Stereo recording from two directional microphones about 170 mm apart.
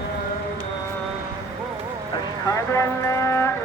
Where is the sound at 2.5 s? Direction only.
15° left (ahead or behind).